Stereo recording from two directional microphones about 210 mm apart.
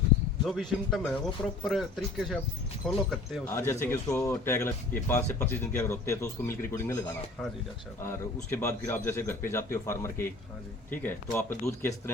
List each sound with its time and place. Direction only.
0.4 s speech: centre (ahead or behind)
3.4 s a man's voice: 15° left (ahead or behind)